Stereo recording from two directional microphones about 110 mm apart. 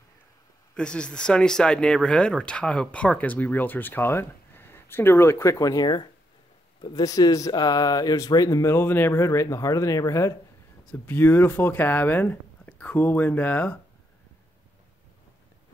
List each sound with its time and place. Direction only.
0.7 s speech: 10° left (ahead or behind); by 10.3 s 30° left (ahead or behind)
10.9 s speech: 15° left (ahead or behind)